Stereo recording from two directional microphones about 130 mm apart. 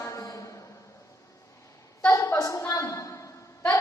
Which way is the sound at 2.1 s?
20° left (ahead or behind).